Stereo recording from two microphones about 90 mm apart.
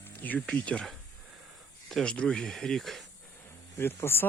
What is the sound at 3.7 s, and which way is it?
Speech, 25° left (ahead or behind).